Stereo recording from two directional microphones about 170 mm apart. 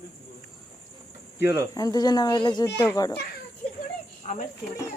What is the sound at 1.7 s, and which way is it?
Speech, 20° left (ahead or behind).